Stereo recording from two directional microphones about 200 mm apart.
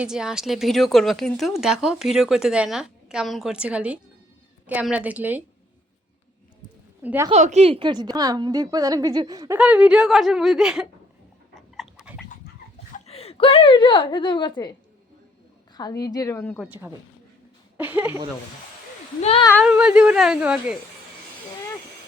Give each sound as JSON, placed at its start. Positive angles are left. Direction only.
{"t": 0.0, "sound": "a woman's voice", "side_deg": -5}
{"t": 7.0, "sound": "a woman's voice", "side_deg": -10}
{"t": 7.3, "sound": "a woman's voice", "side_deg": -35}
{"t": 9.6, "sound": "a woman's voice", "side_deg": -5}
{"t": 11.5, "sound": "dog", "side_deg": 0}
{"t": 13.1, "sound": "a woman's voice", "side_deg": 30}
{"t": 15.7, "sound": "speech", "side_deg": 20}
{"t": 16.6, "sound": "a woman's voice", "side_deg": -5}
{"t": 19.2, "sound": "speech", "side_deg": 30}
{"t": 19.6, "sound": "a woman's voice", "side_deg": -5}